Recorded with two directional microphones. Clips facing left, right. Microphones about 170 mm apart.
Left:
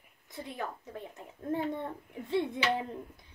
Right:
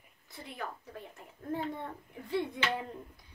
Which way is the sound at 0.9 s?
20° left (ahead or behind).